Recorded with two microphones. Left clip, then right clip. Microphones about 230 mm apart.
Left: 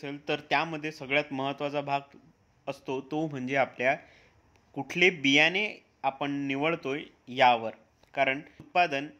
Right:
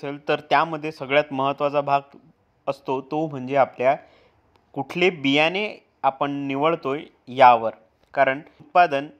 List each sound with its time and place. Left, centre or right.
0.0 s speech: right